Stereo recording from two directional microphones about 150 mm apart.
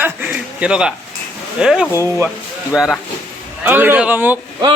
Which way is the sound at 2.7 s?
5° right (ahead or behind).